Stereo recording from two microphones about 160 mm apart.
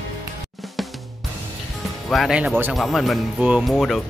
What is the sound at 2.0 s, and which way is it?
Speech, centre (ahead or behind).